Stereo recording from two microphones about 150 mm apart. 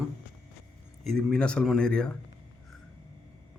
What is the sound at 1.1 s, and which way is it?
Speech, 5° left (ahead or behind).